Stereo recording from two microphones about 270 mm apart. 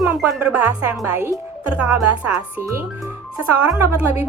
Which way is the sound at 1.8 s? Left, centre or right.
Left.